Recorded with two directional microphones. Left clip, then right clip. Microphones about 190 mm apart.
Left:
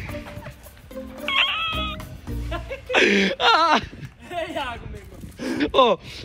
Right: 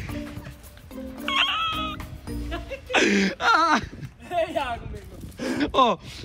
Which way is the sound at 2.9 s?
Centre (ahead or behind).